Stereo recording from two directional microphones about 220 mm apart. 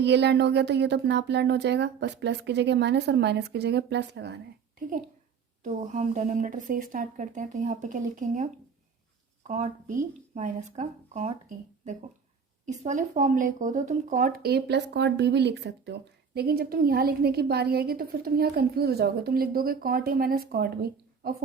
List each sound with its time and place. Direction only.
0.0 s speech: 50° right (ahead or behind)
5.6 s a woman's voice: 35° right (ahead or behind)